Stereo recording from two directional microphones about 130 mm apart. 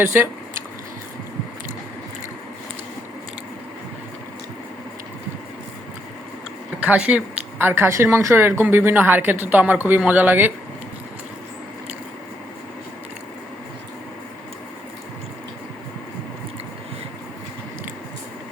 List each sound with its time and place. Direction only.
0.0 s speech: 15° right (ahead or behind)
6.8 s speech: 10° right (ahead or behind)